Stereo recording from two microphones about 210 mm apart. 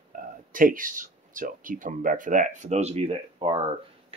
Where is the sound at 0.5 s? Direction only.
40° right (ahead or behind).